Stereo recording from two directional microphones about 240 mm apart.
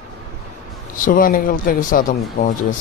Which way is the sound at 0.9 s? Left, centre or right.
Left.